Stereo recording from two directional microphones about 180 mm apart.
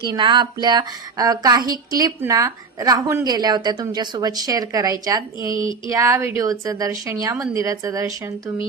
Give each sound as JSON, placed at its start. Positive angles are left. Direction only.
{"t": 0.0, "sound": "a woman's voice", "side_deg": -25}